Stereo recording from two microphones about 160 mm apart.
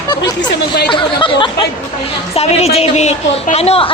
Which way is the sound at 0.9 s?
30° left (ahead or behind).